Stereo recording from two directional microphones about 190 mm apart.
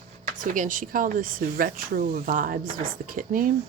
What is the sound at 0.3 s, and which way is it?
Speech, 45° right (ahead or behind).